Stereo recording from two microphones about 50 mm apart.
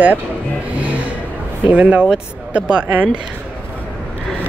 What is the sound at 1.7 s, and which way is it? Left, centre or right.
Speech, right.